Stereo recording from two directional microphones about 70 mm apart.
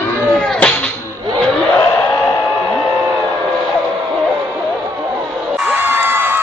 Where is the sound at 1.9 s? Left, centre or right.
Left.